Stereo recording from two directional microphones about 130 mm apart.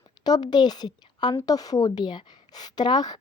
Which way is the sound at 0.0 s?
30° left (ahead or behind).